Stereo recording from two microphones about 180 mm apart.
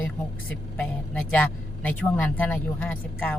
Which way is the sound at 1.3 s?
10° left (ahead or behind).